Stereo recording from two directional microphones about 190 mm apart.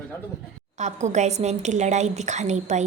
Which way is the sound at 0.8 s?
40° right (ahead or behind).